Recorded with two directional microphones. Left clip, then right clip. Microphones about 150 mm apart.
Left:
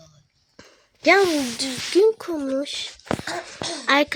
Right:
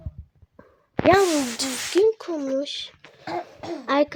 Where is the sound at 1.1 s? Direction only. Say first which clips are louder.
Left 1 dB; 5° left (ahead or behind).